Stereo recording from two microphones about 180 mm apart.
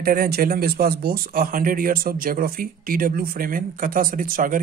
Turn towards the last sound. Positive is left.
turn(degrees=-50)  # may be behind; listen again after turning